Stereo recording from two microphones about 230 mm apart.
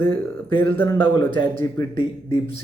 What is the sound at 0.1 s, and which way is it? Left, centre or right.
Speech, centre.